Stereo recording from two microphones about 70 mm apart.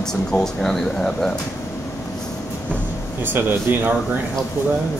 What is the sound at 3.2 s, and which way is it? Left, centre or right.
Speech, right.